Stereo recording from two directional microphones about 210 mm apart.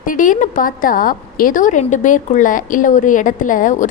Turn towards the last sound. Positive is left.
turn(degrees=40)  # may be behind; listen again after turning